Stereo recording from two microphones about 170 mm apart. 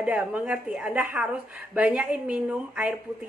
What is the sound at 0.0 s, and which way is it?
A woman's voice, 10° right (ahead or behind).